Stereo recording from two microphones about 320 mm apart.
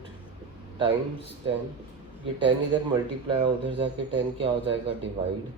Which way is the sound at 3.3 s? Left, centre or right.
Centre.